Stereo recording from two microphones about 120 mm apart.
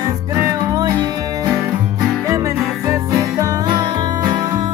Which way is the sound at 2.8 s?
30° right (ahead or behind).